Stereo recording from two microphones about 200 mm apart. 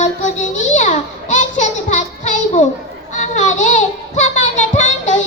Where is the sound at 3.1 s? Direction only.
35° left (ahead or behind).